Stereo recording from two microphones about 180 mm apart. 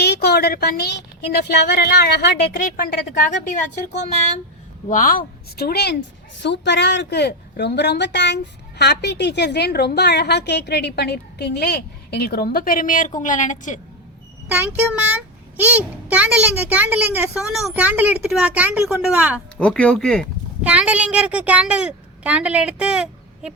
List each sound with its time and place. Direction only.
0.0 s a woman's voice: 65° left (ahead or behind)
4.9 s a woman's voice: 45° left (ahead or behind); by 6.0 s 60° left (ahead or behind)
6.4 s a woman's voice: 75° left (ahead or behind); by 13.7 s 45° left (ahead or behind)
14.4 s a child's voice: 10° right (ahead or behind)
19.5 s speech: 5° left (ahead or behind)
20.7 s a child's voice: 5° right (ahead or behind)